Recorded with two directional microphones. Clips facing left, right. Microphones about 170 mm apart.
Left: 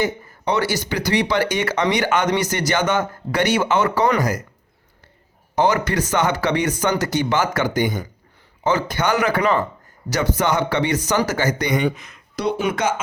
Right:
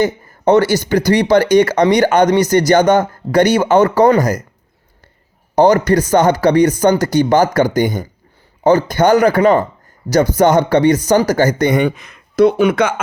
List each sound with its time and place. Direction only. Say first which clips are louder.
0.0 s speech: right 8 dB; 45° right (ahead or behind)
5.5 s speech: right 8 dB; 40° right (ahead or behind); by 13.0 s 65° right (ahead or behind)